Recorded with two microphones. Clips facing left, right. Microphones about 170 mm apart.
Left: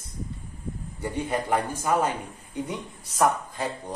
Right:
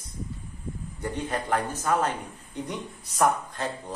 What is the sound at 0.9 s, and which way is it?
A man's voice, 10° left (ahead or behind).